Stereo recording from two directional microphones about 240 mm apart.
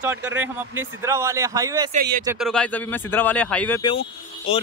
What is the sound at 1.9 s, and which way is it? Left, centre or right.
Speech, right.